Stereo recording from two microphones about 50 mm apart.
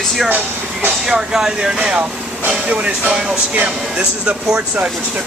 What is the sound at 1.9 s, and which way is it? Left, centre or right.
Speech, right.